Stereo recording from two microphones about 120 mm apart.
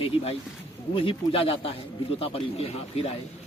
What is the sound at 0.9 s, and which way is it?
A man's voice, 50° left (ahead or behind).